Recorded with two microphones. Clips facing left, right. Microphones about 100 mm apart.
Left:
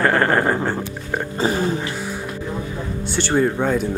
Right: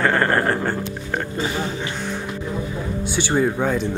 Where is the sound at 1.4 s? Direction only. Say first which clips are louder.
Left 9 dB; 35° left (ahead or behind).